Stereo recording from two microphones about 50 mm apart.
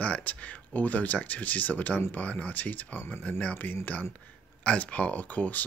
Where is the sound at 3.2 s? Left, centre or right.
Left.